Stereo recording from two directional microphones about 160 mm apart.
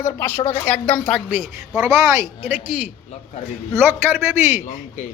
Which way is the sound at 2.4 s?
10° right (ahead or behind).